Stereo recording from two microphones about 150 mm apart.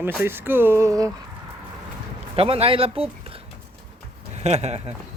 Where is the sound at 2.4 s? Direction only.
40° right (ahead or behind).